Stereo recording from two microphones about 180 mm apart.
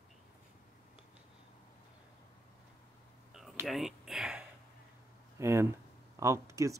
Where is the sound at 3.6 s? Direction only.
Centre (ahead or behind); by 6.8 s 15° right (ahead or behind).